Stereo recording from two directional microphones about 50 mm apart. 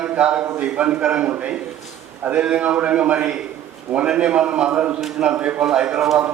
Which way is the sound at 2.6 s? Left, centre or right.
Right.